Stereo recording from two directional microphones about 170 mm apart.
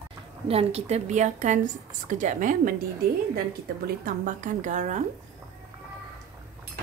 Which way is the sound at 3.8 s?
55° right (ahead or behind).